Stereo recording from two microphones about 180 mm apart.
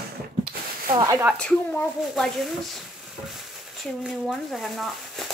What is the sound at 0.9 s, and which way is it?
Speech, 15° right (ahead or behind).